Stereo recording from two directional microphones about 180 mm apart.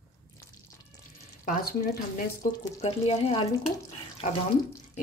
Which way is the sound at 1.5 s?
50° left (ahead or behind).